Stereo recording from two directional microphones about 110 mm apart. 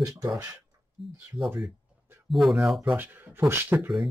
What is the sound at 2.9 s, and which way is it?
Speech, 20° right (ahead or behind).